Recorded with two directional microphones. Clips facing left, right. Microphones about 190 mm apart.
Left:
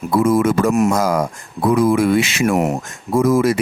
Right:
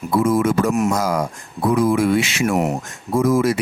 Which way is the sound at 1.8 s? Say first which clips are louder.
Left 2 dB; 70° left (ahead or behind).